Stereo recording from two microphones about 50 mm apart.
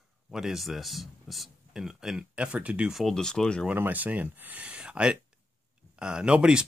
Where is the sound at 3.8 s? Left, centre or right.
Right.